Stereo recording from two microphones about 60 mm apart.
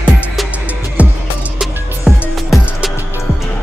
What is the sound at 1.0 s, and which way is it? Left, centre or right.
Music, right.